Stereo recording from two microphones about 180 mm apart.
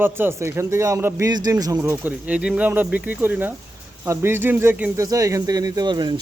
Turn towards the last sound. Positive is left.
turn(degrees=-25)  # may be behind; listen again after turning